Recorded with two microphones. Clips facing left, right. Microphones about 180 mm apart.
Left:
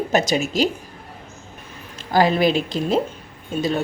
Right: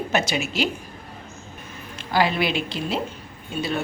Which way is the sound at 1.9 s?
40° left (ahead or behind).